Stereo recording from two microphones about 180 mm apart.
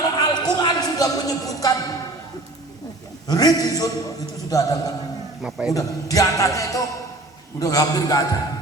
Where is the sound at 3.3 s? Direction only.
20° left (ahead or behind).